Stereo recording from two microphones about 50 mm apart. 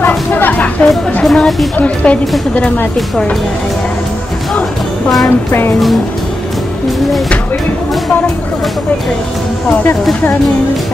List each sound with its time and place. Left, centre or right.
0.3 s a sound: left
1.2 s a woman's voice: centre
2.0 s a woman's voice: left
5.5 s speech: left